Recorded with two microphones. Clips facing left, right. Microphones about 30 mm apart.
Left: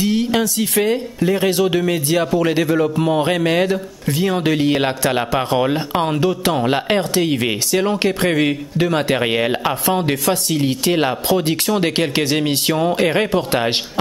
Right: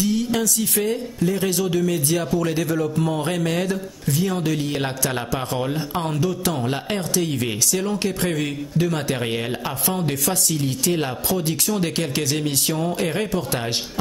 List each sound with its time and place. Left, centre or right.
0.0 s speech: left